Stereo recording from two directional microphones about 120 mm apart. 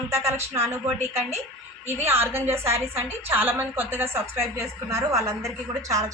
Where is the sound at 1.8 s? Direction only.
20° right (ahead or behind).